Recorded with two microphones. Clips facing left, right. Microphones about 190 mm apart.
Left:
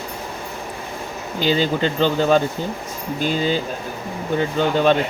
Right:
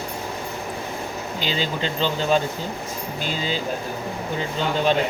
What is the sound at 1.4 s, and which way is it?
Speech, 50° left (ahead or behind).